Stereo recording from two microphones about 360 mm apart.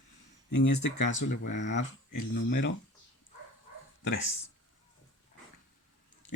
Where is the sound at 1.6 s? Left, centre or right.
Left.